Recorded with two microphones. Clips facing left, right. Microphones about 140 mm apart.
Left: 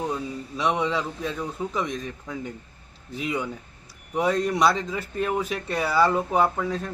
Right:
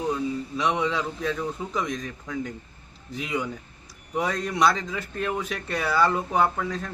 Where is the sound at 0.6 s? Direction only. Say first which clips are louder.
Left 1 dB; 35° left (ahead or behind).